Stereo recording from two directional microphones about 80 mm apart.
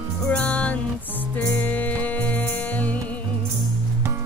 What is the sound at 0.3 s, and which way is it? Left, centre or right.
Music, centre.